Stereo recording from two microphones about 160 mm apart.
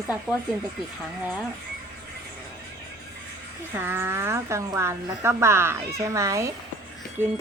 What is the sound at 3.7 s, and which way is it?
A woman's voice, 15° right (ahead or behind).